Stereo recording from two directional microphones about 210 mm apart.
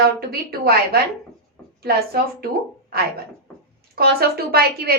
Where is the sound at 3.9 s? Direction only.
45° right (ahead or behind).